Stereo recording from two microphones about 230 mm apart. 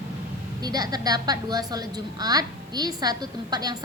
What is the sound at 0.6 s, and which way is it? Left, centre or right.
A woman's voice, centre.